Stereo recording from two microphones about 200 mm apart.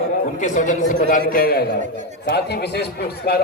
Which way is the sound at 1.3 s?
50° left (ahead or behind).